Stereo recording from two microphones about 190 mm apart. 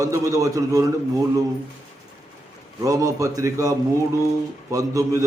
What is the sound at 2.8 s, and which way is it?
A man's voice, 15° right (ahead or behind).